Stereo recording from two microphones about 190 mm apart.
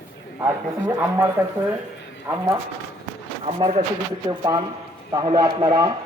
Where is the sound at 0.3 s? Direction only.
15° right (ahead or behind).